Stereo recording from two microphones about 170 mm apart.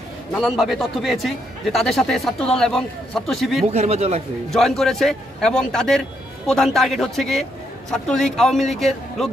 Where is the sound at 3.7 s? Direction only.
35° right (ahead or behind).